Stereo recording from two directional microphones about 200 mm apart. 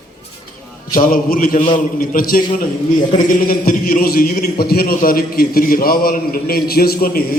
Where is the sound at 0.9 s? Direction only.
45° left (ahead or behind).